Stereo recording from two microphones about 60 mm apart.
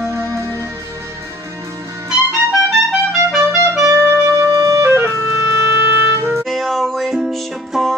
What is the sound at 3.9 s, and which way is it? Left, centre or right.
Music, right.